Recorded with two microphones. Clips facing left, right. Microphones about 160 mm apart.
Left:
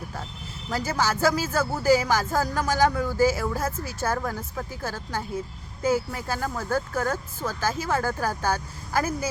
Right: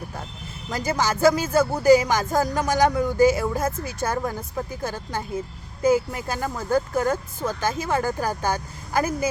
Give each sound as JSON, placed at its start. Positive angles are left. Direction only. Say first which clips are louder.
{"t": 0.9, "sound": "speech", "louder": "right 5 dB", "side_deg": -15}